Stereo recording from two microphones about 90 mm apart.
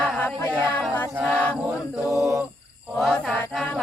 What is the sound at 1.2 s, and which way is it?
Chant, 15° left (ahead or behind).